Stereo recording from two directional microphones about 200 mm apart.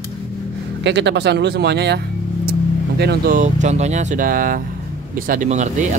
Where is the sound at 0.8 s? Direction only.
60° right (ahead or behind).